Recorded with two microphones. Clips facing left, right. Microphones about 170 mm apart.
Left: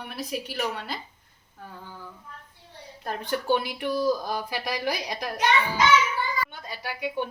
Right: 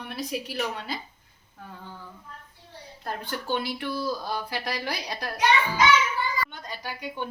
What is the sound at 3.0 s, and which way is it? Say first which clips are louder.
Speech: left 4 dB; 15° left (ahead or behind).